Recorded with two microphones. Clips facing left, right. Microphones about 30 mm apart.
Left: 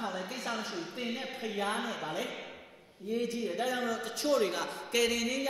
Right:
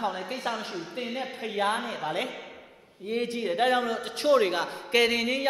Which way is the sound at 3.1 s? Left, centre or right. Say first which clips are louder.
Right 5 dB; right.